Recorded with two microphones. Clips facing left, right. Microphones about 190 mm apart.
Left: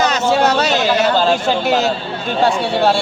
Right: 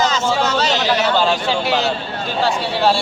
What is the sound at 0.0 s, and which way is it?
Speech, 65° left (ahead or behind).